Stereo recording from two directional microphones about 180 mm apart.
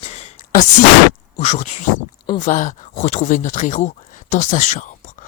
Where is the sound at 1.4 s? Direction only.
40° left (ahead or behind).